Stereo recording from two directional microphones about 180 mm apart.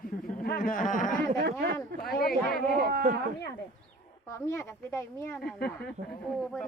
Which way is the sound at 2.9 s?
60° right (ahead or behind).